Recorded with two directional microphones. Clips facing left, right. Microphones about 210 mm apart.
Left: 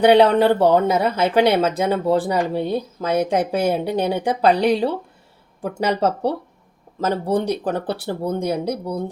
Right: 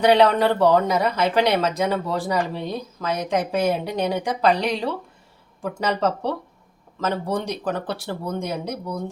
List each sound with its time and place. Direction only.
0.1 s speech: 30° left (ahead or behind)
5.8 s speech: 30° left (ahead or behind)